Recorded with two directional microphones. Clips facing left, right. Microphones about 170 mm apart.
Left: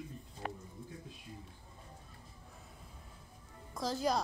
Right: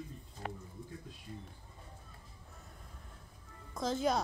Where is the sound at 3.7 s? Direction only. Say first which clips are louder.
Right 1 dB; centre (ahead or behind).